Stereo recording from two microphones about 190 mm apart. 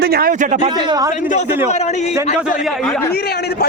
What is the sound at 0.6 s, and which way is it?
Speech, 20° right (ahead or behind).